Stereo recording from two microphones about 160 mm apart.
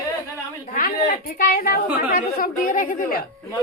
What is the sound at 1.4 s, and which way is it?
A woman's voice, 65° left (ahead or behind).